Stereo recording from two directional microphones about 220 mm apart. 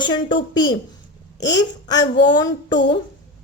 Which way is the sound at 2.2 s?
20° left (ahead or behind).